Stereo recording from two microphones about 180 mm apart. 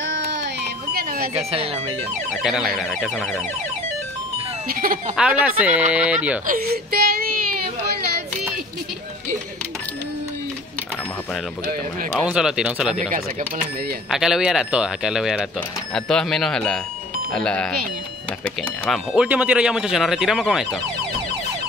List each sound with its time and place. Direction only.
0.0 s music: 90° right
0.9 s alarm clock: 55° right (ahead or behind)
1.3 s speech: 35° right (ahead or behind)
2.7 s speech: centre (ahead or behind)
4.6 s speech: 50° right (ahead or behind)
5.1 s speech: 5° right (ahead or behind)
6.4 s whimper: 55° right (ahead or behind)
12.2 s speech: 5° right (ahead or behind)
14.1 s speech: centre (ahead or behind)